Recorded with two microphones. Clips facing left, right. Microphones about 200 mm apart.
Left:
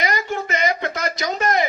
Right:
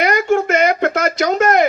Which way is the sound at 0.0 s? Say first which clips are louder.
Right 9 dB; 55° right (ahead or behind).